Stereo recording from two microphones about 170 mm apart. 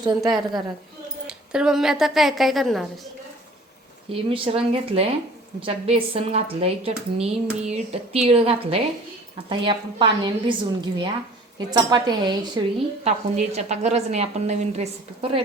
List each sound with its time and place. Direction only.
0.0 s a woman's voice: 25° right (ahead or behind)
1.5 s a woman's voice: 5° right (ahead or behind)
4.1 s a woman's voice: 35° right (ahead or behind)
13.1 s a woman's voice: 40° right (ahead or behind)